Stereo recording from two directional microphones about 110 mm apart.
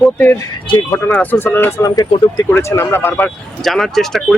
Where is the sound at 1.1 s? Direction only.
15° left (ahead or behind).